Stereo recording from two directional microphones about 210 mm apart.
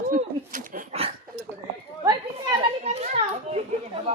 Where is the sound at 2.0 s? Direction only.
20° right (ahead or behind).